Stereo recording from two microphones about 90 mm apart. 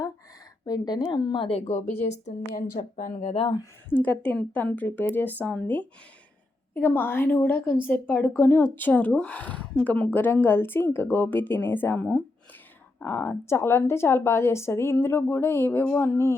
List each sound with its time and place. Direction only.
0.6 s speech: 50° left (ahead or behind); by 1.6 s 80° left
3.3 s speech: 80° left
3.8 s a woman's voice: 20° left (ahead or behind)